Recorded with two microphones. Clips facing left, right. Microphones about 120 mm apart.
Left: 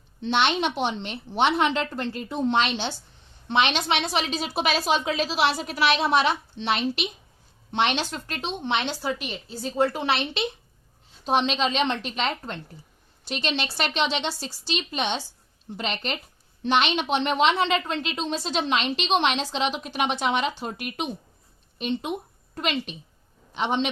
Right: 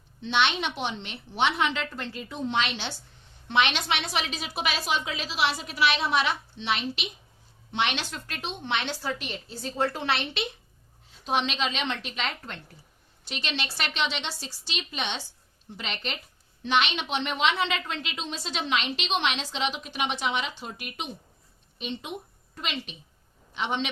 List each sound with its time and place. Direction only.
0.2 s a woman's voice: 40° left (ahead or behind)
3.5 s a woman's voice: 25° left (ahead or behind)
9.2 s a woman's voice: 5° left (ahead or behind)
11.3 s a woman's voice: 35° left (ahead or behind)
22.5 s a woman's voice: 50° left (ahead or behind)